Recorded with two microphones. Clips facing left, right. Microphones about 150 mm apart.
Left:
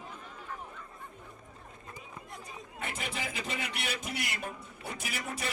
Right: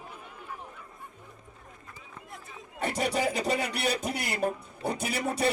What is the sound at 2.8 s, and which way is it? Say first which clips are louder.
Speech: right 11 dB; 40° right (ahead or behind).